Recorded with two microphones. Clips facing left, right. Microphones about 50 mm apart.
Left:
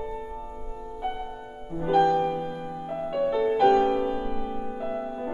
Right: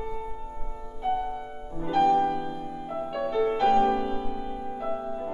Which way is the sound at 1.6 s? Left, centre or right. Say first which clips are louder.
Left 6 dB; left.